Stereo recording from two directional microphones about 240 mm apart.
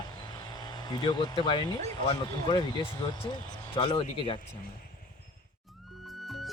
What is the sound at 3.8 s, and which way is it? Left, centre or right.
Speech, left.